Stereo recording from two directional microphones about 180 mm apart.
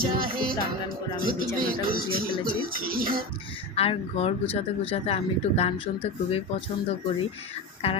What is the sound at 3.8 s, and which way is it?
Speech, 35° left (ahead or behind).